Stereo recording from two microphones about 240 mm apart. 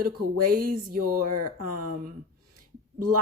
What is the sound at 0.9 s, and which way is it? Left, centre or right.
Speech, right.